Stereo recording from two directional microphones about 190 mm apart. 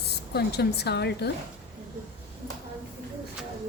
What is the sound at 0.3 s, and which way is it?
Speech, 60° left (ahead or behind).